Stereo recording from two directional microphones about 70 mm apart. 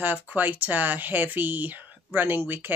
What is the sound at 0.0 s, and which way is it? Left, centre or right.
Speech, right.